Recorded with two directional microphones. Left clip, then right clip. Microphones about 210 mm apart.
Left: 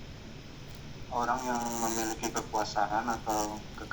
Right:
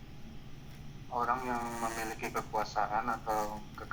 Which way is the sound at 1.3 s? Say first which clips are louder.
Left 2 dB; 35° left (ahead or behind).